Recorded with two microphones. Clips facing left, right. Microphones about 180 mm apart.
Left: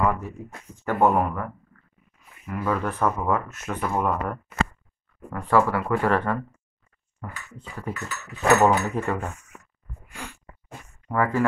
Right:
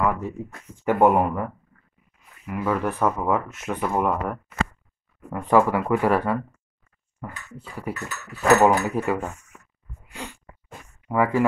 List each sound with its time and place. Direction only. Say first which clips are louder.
0.8 s speech: right 3 dB; 15° right (ahead or behind)
2.5 s speech: right 2 dB; 10° right (ahead or behind)
11.1 s speech: right 2 dB; 10° right (ahead or behind)